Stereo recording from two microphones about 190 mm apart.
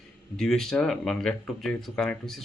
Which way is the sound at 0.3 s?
5° left (ahead or behind).